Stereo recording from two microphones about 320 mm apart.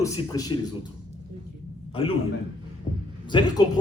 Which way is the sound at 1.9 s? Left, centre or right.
Centre.